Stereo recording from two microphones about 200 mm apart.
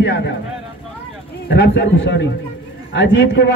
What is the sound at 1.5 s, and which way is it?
A man's voice, 60° left (ahead or behind).